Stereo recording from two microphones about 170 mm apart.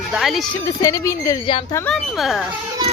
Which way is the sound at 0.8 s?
15° left (ahead or behind).